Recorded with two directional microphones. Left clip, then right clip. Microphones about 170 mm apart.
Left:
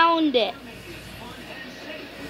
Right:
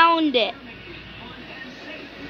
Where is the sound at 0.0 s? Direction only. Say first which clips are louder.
Right 2 dB; 5° left (ahead or behind).